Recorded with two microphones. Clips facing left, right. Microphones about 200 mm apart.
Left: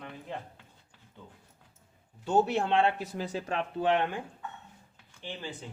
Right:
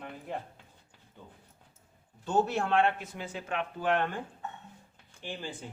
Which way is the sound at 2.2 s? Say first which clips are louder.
Left 2 dB; 20° left (ahead or behind).